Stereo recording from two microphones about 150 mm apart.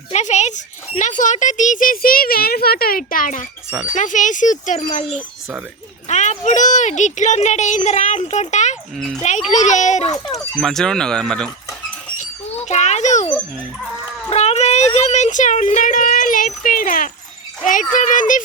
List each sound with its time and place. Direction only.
0.1 s a child's voice: 50° left (ahead or behind)
5.0 s speech: centre (ahead or behind)
6.1 s speech: 55° left (ahead or behind)
9.0 s speech: 5° left (ahead or behind)
9.5 s speech: 55° left (ahead or behind)
10.3 s speech: centre (ahead or behind)
12.1 s a sound: 55° left (ahead or behind)
12.6 s speech: 50° left (ahead or behind)
14.3 s a child's voice: 45° left (ahead or behind)